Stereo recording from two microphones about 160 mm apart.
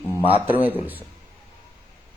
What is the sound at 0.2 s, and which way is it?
Speech, 40° left (ahead or behind).